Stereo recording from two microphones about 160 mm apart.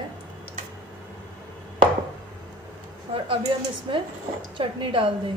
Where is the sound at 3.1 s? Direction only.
35° right (ahead or behind).